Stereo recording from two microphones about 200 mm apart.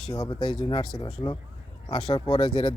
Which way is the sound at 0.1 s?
20° left (ahead or behind).